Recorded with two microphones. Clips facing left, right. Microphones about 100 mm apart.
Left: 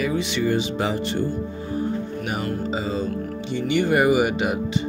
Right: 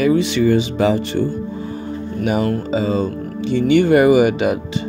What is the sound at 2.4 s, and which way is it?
Speech, 75° right (ahead or behind).